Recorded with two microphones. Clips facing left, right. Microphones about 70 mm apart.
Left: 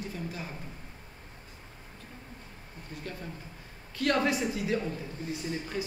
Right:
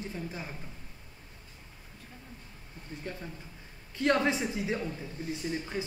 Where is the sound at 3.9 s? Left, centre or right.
Right.